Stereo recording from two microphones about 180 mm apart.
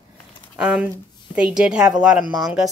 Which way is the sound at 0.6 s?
5° right (ahead or behind).